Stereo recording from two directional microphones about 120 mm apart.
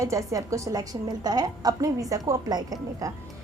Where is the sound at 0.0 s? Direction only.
25° right (ahead or behind).